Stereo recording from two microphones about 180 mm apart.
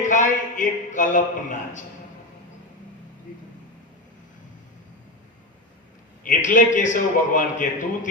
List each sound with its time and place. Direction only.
0.0 s a man's voice: 45° left (ahead or behind)
6.2 s a man's voice: 45° left (ahead or behind)